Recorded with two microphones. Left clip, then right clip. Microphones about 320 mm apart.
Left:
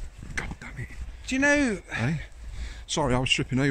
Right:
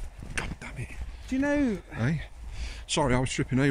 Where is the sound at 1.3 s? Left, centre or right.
Left.